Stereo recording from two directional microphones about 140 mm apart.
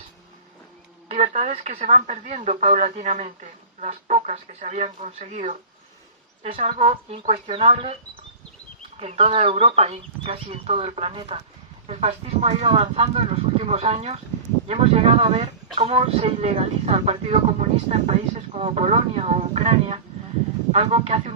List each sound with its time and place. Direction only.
1.0 s speech: 50° right (ahead or behind)
6.9 s speech: 45° right (ahead or behind)
9.0 s speech: 45° right (ahead or behind)